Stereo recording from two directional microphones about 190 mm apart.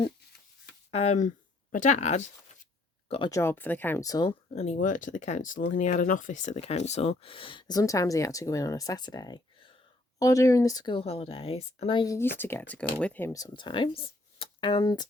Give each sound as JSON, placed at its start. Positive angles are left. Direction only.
{"t": 0.9, "sound": "speech", "side_deg": 30}
{"t": 3.1, "sound": "speech", "side_deg": 20}
{"t": 4.5, "sound": "speech", "side_deg": 40}